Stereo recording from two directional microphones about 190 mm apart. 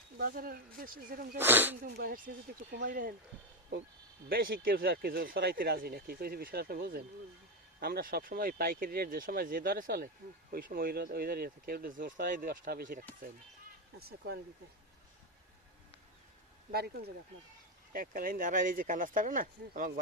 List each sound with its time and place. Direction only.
0.2 s speech: 50° right (ahead or behind)
1.4 s speech: 10° right (ahead or behind)
1.8 s speech: 50° right (ahead or behind)
4.3 s speech: 50° right (ahead or behind)
16.7 s speech: 55° right (ahead or behind)